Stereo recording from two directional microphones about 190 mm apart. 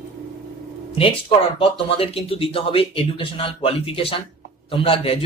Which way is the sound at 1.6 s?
30° left (ahead or behind).